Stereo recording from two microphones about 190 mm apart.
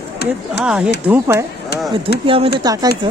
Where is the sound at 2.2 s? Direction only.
25° right (ahead or behind).